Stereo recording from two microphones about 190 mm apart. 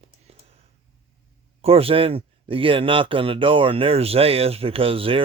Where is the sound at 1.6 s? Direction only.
30° right (ahead or behind).